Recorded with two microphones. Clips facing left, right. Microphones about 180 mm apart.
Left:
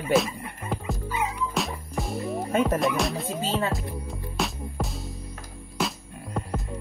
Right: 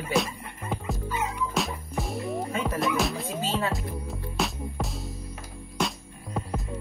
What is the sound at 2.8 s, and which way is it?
Speech, centre (ahead or behind).